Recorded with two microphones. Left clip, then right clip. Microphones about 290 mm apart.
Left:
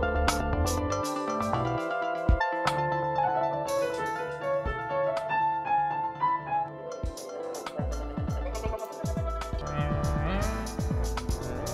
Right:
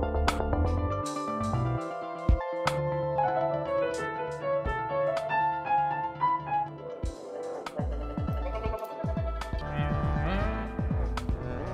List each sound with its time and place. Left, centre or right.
0.8 s music: left
2.2 s music: centre
9.8 s music: centre